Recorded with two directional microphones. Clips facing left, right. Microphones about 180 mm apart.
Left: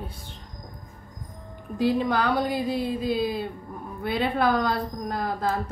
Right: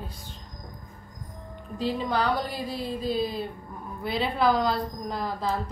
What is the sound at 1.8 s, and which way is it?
Speech, 55° left (ahead or behind).